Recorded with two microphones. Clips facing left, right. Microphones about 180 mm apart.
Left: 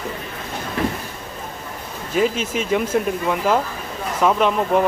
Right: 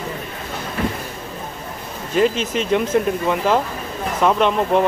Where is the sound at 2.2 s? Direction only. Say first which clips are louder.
Right 2 dB; 5° left (ahead or behind).